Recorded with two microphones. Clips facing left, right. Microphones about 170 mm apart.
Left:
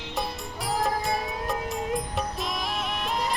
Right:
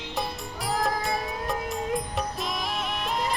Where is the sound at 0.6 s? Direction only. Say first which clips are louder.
Even; centre (ahead or behind).